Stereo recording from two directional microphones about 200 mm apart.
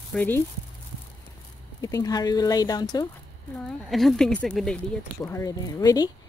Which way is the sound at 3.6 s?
Centre (ahead or behind).